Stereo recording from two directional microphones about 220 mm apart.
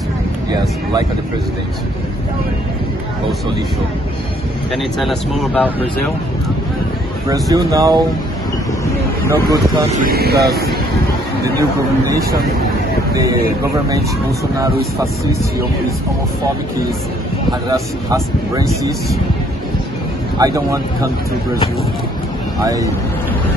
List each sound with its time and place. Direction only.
4.9 s speech: centre (ahead or behind)
7.2 s speech: 15° right (ahead or behind)
9.3 s speech: 15° right (ahead or behind)
10.0 s speech: 45° right (ahead or behind)
13.1 s speech: 15° right (ahead or behind)
14.6 s speech: 15° right (ahead or behind)
17.5 s speech: 15° right (ahead or behind)
20.3 s speech: 15° right (ahead or behind)
22.6 s speech: 15° right (ahead or behind)